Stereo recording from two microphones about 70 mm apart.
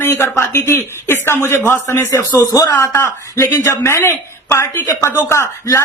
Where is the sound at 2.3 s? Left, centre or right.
Left.